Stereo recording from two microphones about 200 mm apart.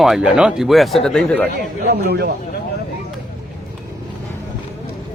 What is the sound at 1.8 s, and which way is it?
Speech, 55° right (ahead or behind).